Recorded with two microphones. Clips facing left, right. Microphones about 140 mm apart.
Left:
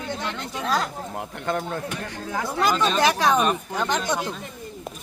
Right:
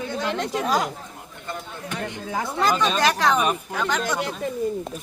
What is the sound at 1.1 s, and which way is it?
Speech, 75° left (ahead or behind).